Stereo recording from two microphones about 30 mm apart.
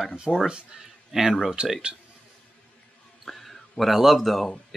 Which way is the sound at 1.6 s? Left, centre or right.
Right.